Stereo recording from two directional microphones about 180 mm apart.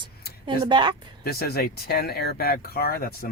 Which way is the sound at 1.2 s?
60° left (ahead or behind).